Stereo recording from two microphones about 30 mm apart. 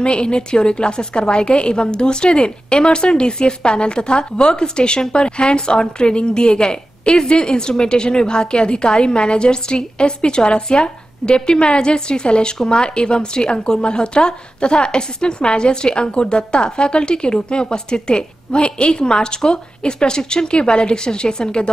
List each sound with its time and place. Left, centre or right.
0.0 s a woman's voice: left